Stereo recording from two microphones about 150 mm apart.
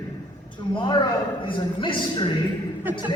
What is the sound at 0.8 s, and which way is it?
A man's voice, 30° left (ahead or behind).